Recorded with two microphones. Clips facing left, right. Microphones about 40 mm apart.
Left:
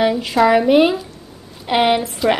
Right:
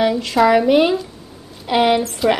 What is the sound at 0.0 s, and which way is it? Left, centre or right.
A woman's voice, centre.